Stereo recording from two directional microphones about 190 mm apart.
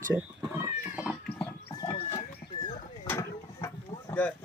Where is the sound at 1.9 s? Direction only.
30° left (ahead or behind).